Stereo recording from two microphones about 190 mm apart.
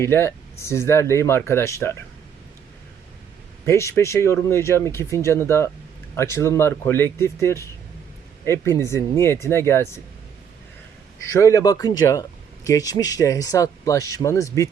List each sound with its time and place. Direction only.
0.0 s speech: 15° left (ahead or behind)
3.7 s speech: 15° left (ahead or behind)
11.3 s speech: 15° left (ahead or behind)